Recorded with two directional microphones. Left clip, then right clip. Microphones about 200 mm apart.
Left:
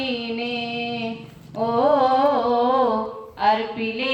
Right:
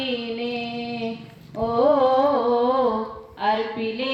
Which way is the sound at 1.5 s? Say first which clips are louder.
Even; 40° left (ahead or behind).